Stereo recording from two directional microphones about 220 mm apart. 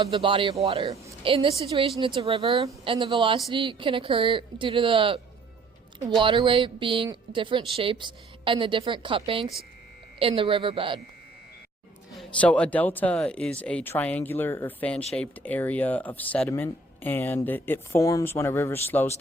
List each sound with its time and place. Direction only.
0.0 s a woman's voice: 25° right (ahead or behind)
12.1 s speech: 5° left (ahead or behind)